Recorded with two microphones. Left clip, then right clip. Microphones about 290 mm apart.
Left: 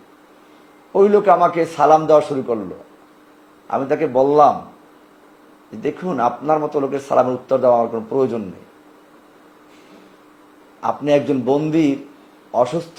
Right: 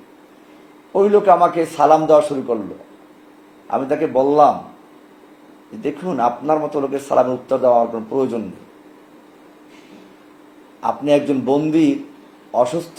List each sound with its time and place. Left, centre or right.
0.9 s speech: left
3.7 s speech: left
5.8 s speech: left
10.8 s speech: left